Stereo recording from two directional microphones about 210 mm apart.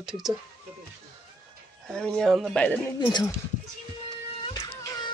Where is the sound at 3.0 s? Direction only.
20° left (ahead or behind).